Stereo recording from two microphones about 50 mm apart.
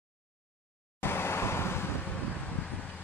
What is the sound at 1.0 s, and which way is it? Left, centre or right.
Vehicle, left.